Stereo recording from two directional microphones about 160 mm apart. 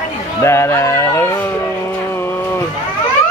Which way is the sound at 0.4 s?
15° left (ahead or behind).